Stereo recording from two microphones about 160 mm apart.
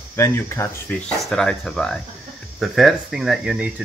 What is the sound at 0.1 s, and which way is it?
Speech, 15° left (ahead or behind).